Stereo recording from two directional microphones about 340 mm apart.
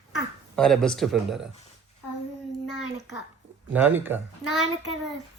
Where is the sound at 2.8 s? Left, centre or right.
Left.